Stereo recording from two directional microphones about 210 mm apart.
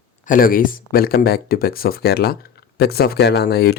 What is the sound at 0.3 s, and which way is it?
Speech, 40° left (ahead or behind).